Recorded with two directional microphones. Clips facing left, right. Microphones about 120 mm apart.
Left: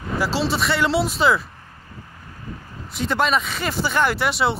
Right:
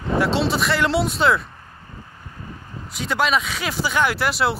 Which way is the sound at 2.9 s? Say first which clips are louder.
Left 1 dB; centre (ahead or behind).